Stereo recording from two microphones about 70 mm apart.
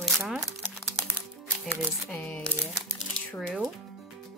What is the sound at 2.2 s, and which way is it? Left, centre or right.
Speech, centre.